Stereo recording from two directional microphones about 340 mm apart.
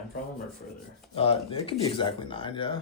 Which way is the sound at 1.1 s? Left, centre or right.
Centre.